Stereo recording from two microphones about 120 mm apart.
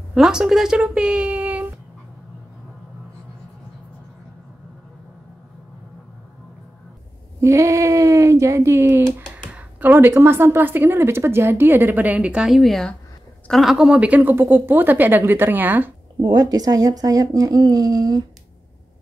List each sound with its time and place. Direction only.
0.1 s speech: 5° right (ahead or behind)
7.3 s a woman's voice: 25° right (ahead or behind)
16.2 s speech: 35° right (ahead or behind)